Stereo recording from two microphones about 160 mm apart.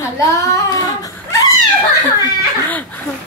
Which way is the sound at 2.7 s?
10° left (ahead or behind).